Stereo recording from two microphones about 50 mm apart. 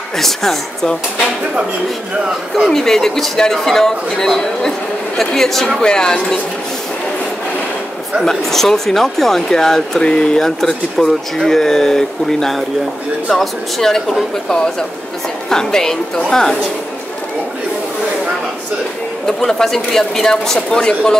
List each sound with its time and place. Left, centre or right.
0.2 s speech: centre
2.7 s speech: centre
8.3 s speech: centre
19.2 s speech: centre